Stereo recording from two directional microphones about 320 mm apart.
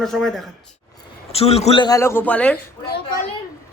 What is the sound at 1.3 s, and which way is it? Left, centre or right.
A man's voice, centre.